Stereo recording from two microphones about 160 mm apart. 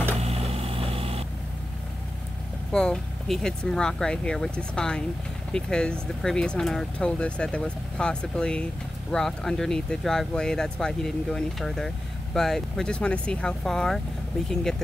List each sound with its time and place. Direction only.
0.2 s vehicle: 40° right (ahead or behind)
2.7 s speech: 5° left (ahead or behind)